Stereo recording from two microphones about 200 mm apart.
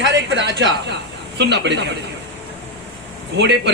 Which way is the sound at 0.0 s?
60° right (ahead or behind).